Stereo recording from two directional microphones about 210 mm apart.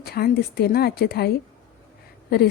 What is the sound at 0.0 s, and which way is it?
A woman's voice, 45° left (ahead or behind).